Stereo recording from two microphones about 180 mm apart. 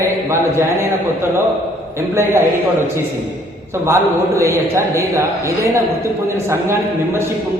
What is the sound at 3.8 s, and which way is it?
A man's voice, 15° right (ahead or behind).